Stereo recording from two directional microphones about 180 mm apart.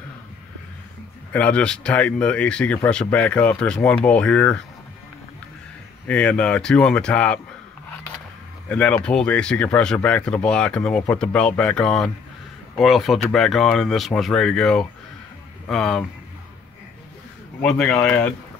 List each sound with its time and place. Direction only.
1.3 s speech: 5° left (ahead or behind)
6.0 s speech: 5° left (ahead or behind)
8.6 s speech: 5° left (ahead or behind)
17.6 s speech: 5° left (ahead or behind)